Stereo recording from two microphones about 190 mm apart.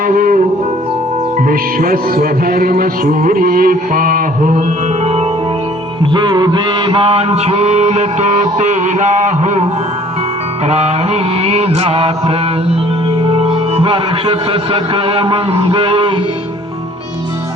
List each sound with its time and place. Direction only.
0.0 s music: 45° right (ahead or behind)
1.5 s music: 50° right (ahead or behind)
6.1 s mantra: 25° right (ahead or behind)
10.7 s mantra: 35° right (ahead or behind)
13.2 s a man's voice: 30° right (ahead or behind)